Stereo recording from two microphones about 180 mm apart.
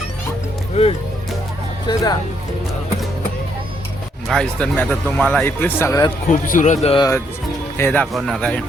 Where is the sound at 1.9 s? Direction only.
20° left (ahead or behind).